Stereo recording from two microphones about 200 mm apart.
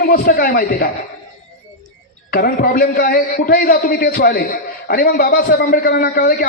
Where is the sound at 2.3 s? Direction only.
45° left (ahead or behind).